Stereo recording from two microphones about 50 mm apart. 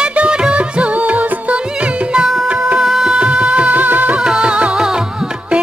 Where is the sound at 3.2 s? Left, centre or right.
Centre.